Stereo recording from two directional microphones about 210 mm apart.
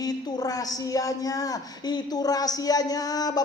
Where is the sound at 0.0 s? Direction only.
20° left (ahead or behind).